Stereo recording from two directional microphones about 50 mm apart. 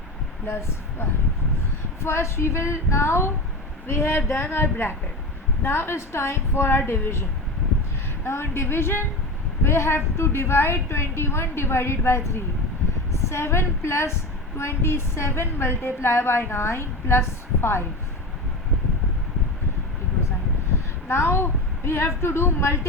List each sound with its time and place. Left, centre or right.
0.4 s a woman's voice: left
21.1 s a woman's voice: left